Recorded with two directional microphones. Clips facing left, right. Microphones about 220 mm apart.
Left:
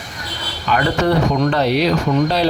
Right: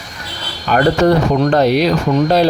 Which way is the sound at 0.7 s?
45° right (ahead or behind).